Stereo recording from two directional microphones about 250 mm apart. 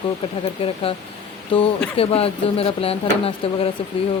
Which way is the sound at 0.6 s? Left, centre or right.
Left.